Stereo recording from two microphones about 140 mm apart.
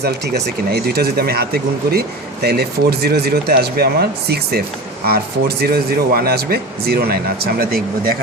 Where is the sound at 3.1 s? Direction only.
90° right.